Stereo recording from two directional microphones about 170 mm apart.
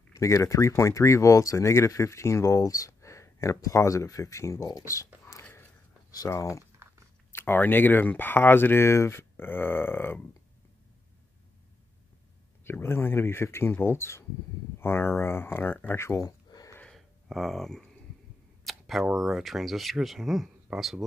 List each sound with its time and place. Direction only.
0.1 s speech: 15° left (ahead or behind)
6.8 s chewing: 15° right (ahead or behind)
7.3 s speech: 10° left (ahead or behind)
12.6 s speech: 15° left (ahead or behind)
15.9 s a sound: 15° left (ahead or behind)
16.8 s a sound: centre (ahead or behind)
18.7 s speech: centre (ahead or behind)